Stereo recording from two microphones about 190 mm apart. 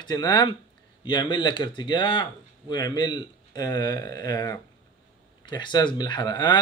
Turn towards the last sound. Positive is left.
turn(degrees=20)  # may be behind; listen again after turning